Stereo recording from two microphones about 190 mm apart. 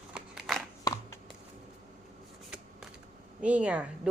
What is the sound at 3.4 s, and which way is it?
Speech, 5° right (ahead or behind).